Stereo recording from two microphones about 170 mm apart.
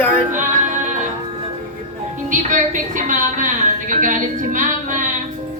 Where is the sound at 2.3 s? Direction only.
45° right (ahead or behind).